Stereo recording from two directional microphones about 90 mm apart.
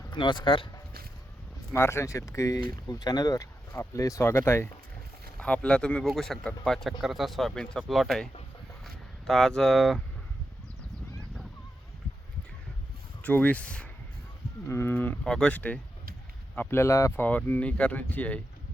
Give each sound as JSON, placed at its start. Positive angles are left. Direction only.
{"t": 0.1, "sound": "speech", "side_deg": 60}
{"t": 1.7, "sound": "speech", "side_deg": 30}
{"t": 5.4, "sound": "speech", "side_deg": 10}
{"t": 13.2, "sound": "speech", "side_deg": 15}
{"t": 14.7, "sound": "speech", "side_deg": 30}
{"t": 15.2, "sound": "speech", "side_deg": 5}
{"t": 16.6, "sound": "speech", "side_deg": 25}
{"t": 17.2, "sound": "speech", "side_deg": 20}